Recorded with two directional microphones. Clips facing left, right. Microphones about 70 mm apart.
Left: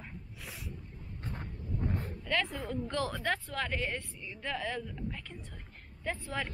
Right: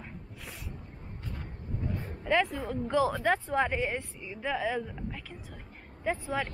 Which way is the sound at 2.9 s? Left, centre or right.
Centre.